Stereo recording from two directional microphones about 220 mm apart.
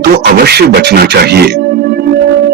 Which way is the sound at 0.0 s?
45° right (ahead or behind).